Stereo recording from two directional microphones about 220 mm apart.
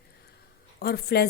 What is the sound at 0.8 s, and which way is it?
Speech, 45° left (ahead or behind).